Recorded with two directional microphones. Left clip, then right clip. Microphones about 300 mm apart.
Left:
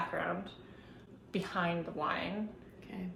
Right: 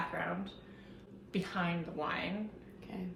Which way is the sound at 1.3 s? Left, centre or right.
Centre.